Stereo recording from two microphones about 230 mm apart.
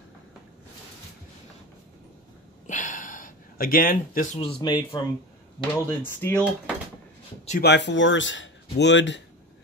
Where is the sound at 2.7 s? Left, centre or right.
Left.